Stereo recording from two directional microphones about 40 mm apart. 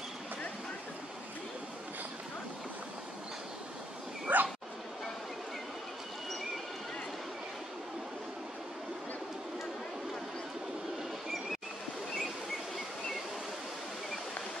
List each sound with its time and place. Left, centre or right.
4.3 s bow-wow: right